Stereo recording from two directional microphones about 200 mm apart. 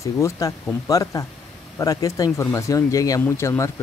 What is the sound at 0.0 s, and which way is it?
Speech, 15° left (ahead or behind).